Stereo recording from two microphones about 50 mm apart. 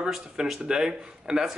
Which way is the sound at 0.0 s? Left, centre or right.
Centre.